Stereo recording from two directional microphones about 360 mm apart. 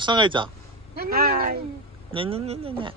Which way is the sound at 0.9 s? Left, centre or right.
Right.